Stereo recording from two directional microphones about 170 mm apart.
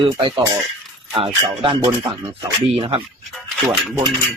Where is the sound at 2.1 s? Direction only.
30° right (ahead or behind).